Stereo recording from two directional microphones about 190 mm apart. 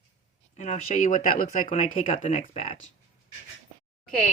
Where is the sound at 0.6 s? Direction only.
35° left (ahead or behind).